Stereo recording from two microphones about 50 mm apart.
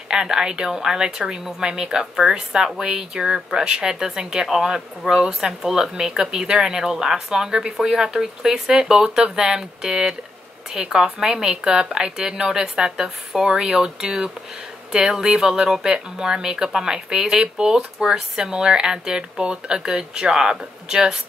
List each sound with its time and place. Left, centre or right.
0.1 s speech: centre